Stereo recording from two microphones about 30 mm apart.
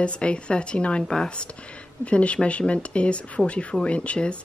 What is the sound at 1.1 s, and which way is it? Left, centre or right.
Speech, left.